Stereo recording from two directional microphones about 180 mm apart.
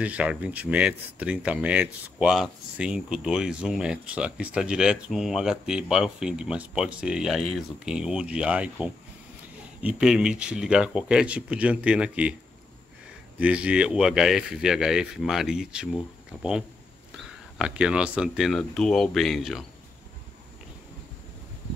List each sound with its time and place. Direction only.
0.0 s speech: 5° right (ahead or behind)
13.4 s speech: 5° right (ahead or behind)
17.6 s speech: 5° right (ahead or behind)